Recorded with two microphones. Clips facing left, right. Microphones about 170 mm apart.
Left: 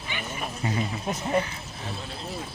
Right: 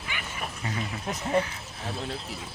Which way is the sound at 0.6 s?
15° left (ahead or behind).